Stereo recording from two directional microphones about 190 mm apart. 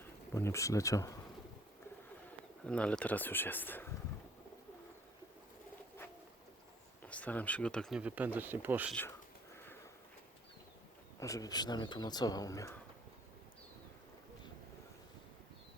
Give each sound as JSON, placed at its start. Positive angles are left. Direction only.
{"t": 0.0, "sound": "speech", "side_deg": 15}
{"t": 2.6, "sound": "speech", "side_deg": 5}
{"t": 7.0, "sound": "speech", "side_deg": 5}
{"t": 11.2, "sound": "speech", "side_deg": 15}